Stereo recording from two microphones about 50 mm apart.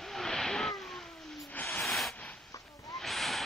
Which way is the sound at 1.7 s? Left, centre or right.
Centre.